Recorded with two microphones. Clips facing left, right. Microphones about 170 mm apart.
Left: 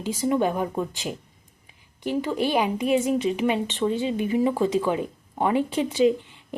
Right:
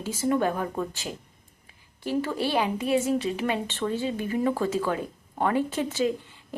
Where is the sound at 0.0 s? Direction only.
15° left (ahead or behind).